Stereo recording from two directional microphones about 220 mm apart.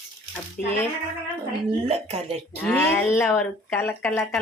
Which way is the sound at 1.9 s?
30° right (ahead or behind).